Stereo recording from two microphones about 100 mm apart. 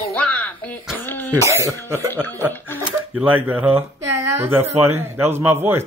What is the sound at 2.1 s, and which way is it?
Speech, 20° left (ahead or behind).